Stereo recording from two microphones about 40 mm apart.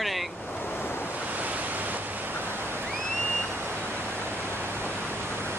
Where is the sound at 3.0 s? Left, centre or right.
Centre.